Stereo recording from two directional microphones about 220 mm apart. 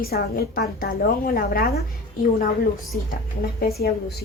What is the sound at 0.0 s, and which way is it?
A woman's voice, 45° left (ahead or behind).